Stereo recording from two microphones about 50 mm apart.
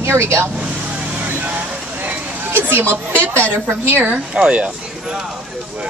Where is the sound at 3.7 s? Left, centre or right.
Right.